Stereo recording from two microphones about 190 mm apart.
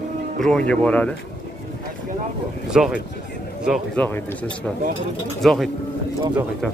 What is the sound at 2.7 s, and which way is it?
Speech, 5° right (ahead or behind).